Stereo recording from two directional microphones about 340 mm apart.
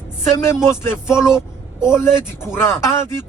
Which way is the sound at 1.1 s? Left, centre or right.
Centre.